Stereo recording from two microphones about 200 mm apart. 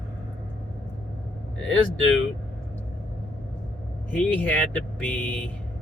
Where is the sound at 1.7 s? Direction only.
70° left (ahead or behind).